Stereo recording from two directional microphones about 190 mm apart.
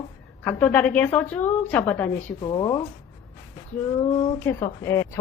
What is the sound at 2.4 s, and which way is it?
Speech, 20° left (ahead or behind).